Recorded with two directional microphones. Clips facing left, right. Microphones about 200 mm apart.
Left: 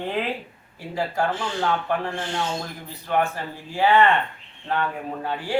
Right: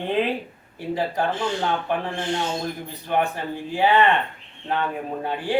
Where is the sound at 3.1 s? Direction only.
20° right (ahead or behind).